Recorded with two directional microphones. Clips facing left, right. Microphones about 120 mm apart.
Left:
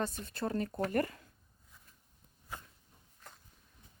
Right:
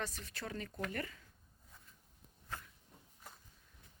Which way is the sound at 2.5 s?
15° left (ahead or behind).